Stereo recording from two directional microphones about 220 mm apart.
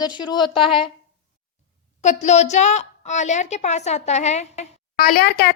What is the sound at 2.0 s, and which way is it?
A woman's voice, 35° left (ahead or behind).